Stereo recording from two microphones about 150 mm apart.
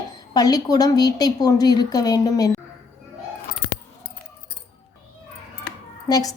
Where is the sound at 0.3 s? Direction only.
25° left (ahead or behind).